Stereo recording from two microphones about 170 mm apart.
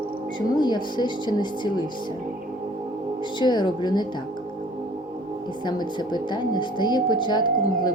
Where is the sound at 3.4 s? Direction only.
25° left (ahead or behind).